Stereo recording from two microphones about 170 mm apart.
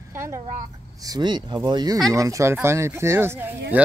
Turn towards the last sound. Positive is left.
turn(degrees=-10)  # may be behind; listen again after turning